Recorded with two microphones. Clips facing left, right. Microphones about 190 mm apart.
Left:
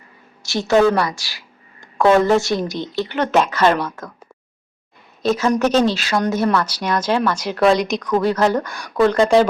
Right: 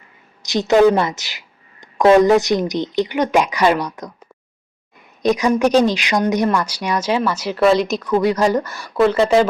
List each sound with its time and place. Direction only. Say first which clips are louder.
0.4 s a woman's voice: right 2 dB; 20° right (ahead or behind)
5.2 s speech: right 2 dB; 15° right (ahead or behind)